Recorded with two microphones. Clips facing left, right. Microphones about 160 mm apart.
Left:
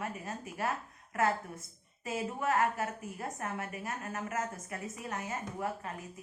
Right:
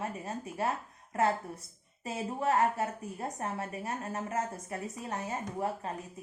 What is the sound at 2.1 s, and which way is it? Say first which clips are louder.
A woman's voice: right 2 dB; 30° right (ahead or behind).